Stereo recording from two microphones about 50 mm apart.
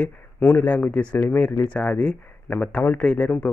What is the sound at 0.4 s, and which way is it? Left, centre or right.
Speech, left.